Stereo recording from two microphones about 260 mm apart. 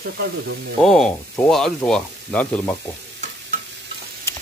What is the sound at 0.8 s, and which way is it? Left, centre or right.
Speech, centre.